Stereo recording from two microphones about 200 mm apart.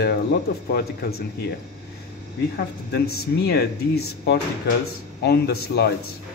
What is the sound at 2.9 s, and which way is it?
Speech, 50° left (ahead or behind).